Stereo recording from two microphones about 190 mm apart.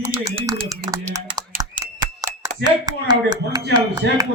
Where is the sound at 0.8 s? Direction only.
20° right (ahead or behind).